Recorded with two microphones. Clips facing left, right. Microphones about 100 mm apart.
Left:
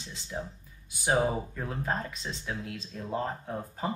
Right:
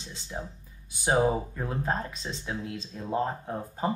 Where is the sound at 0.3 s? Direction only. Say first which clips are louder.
Left 1 dB; 15° right (ahead or behind).